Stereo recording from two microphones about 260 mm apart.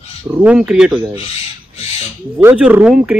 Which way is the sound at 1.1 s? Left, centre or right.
Left.